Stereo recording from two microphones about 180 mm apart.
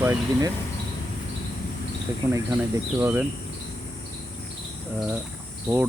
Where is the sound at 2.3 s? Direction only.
15° right (ahead or behind).